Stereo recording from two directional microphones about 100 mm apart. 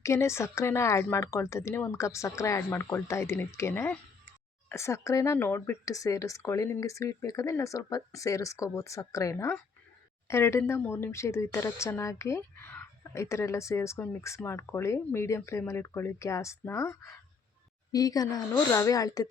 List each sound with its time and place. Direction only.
0.0 s speech: 30° left (ahead or behind)
12.4 s a sound: 20° left (ahead or behind)
13.2 s speech: 30° left (ahead or behind)
17.9 s speech: 40° left (ahead or behind)